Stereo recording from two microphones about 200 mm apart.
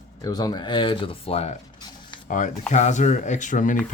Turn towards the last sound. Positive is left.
turn(degrees=40)  # may be behind; listen again after turning